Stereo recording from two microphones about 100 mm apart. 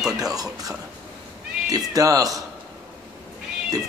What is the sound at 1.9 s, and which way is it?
Speech, 35° right (ahead or behind).